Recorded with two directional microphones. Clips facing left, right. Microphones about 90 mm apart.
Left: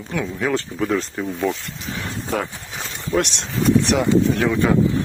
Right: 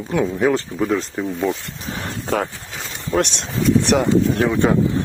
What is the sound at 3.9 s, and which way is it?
Speech, 45° right (ahead or behind).